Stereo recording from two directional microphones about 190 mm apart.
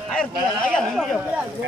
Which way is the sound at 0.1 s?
5° left (ahead or behind).